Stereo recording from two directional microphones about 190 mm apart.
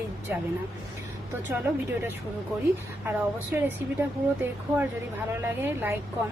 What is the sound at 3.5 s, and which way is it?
Speech, 10° right (ahead or behind).